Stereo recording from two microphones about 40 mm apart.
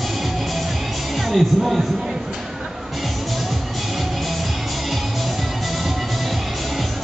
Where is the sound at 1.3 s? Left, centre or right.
Centre.